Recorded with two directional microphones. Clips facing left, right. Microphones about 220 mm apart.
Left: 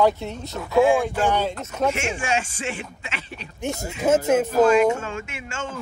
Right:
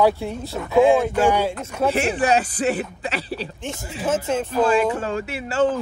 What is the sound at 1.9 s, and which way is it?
Speech, 35° right (ahead or behind).